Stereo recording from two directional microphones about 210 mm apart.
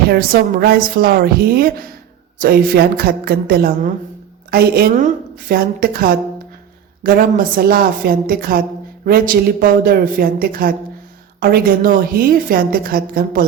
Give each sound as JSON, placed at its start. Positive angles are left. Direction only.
{"t": 0.1, "sound": "a woman's voice", "side_deg": -45}